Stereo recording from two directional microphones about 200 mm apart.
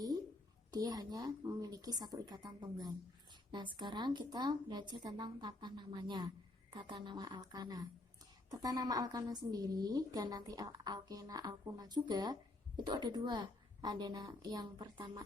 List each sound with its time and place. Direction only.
0.7 s a woman's voice: 20° right (ahead or behind)